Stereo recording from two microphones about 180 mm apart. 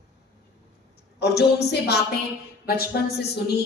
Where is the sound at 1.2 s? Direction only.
65° left (ahead or behind).